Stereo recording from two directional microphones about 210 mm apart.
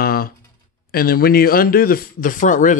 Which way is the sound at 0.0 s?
45° left (ahead or behind).